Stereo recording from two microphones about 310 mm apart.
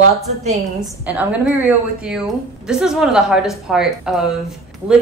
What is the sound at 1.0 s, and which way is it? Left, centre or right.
Speech, centre.